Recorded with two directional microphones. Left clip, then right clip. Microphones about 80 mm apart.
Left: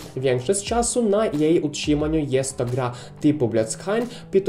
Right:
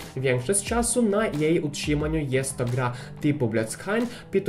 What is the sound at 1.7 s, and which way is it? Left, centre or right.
Speech, left.